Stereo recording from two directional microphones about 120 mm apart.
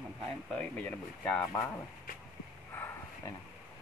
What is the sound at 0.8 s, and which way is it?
Speech, 10° left (ahead or behind).